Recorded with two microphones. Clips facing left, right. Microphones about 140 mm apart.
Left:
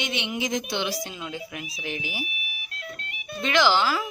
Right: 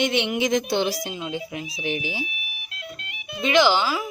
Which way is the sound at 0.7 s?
40° right (ahead or behind).